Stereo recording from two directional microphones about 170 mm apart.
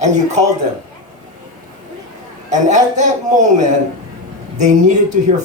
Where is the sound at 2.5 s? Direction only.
45° right (ahead or behind).